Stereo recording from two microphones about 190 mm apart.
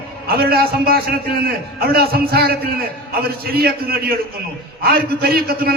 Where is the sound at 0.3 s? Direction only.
55° right (ahead or behind).